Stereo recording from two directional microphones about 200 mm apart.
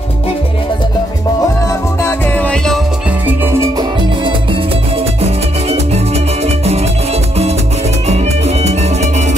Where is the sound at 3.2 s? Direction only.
10° right (ahead or behind).